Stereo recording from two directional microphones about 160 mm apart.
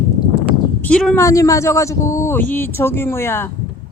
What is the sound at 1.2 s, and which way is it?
Speech, 20° left (ahead or behind).